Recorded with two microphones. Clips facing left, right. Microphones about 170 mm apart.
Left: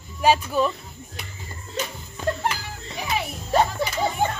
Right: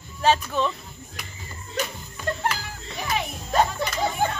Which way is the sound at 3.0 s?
10° left (ahead or behind).